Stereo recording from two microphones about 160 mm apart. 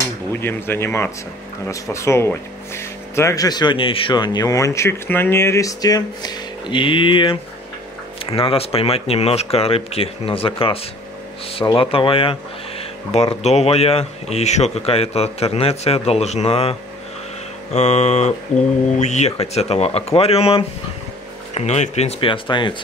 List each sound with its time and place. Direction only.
0.0 s speech: 15° left (ahead or behind); by 16.7 s 40° left (ahead or behind)
17.7 s a sound: 45° left (ahead or behind)
18.9 s speech: 45° left (ahead or behind); by 22.8 s 30° left (ahead or behind)